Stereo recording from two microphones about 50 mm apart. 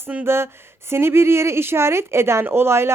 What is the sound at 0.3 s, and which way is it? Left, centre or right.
Speech, right.